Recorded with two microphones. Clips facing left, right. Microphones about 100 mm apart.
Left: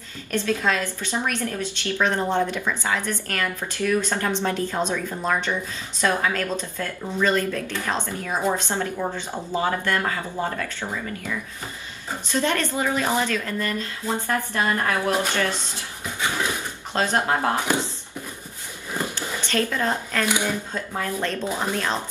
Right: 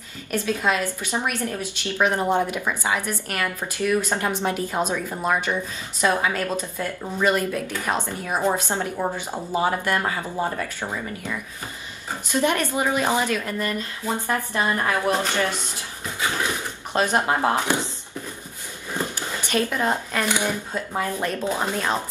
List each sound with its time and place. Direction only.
0.3 s a woman's voice: 15° right (ahead or behind)
12.3 s a woman's voice: 15° right (ahead or behind)
16.9 s speech: 15° right (ahead or behind)
19.1 s a woman's voice: 15° right (ahead or behind)